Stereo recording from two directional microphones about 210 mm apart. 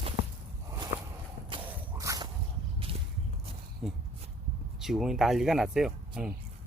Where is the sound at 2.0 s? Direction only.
15° right (ahead or behind).